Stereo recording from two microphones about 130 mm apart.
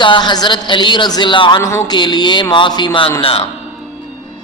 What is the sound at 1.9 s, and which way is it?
A woman's voice, 35° left (ahead or behind).